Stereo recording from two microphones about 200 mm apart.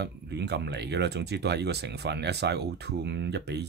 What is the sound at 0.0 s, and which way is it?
Speech, 55° right (ahead or behind).